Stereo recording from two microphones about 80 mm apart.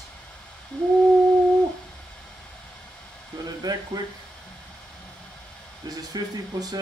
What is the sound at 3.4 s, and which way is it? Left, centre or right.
Speech, right.